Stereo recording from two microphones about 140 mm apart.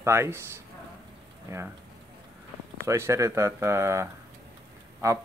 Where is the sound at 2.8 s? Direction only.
20° right (ahead or behind).